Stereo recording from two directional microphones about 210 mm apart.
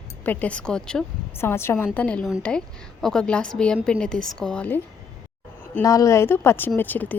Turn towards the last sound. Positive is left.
turn(degrees=10)  # may be behind; listen again after turning